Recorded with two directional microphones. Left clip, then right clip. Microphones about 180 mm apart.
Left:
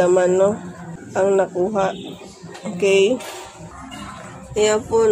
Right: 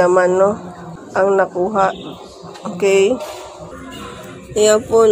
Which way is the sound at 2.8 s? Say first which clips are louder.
Right 2 dB; 50° right (ahead or behind).